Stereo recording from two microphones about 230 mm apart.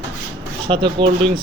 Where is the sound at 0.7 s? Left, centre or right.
Right.